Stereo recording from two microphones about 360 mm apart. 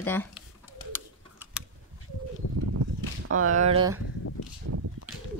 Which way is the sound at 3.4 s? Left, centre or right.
Centre.